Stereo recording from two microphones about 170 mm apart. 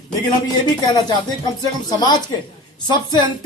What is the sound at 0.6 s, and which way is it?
Speech, 25° left (ahead or behind).